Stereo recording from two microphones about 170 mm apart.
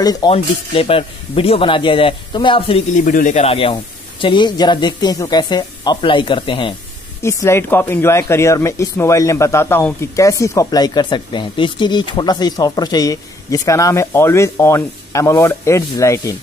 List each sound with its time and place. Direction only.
0.0 s speech: 20° left (ahead or behind)
0.3 s speech: 35° left (ahead or behind)
3.0 s speech: 50° left (ahead or behind); by 6.7 s 30° left (ahead or behind)
7.2 s speech: 15° left (ahead or behind)